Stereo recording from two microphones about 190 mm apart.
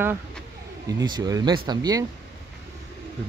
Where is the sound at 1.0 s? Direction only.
20° right (ahead or behind).